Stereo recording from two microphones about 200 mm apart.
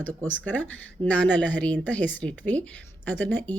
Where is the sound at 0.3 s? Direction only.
10° left (ahead or behind).